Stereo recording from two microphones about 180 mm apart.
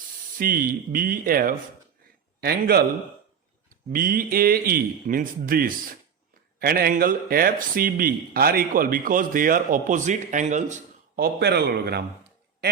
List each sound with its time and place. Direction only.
0.3 s a man's voice: 50° right (ahead or behind)
3.9 s speech: 50° right (ahead or behind)
11.2 s a man's voice: 65° right (ahead or behind)